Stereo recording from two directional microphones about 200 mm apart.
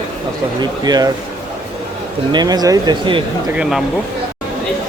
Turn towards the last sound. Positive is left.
turn(degrees=0)  # may be behind; listen again after turning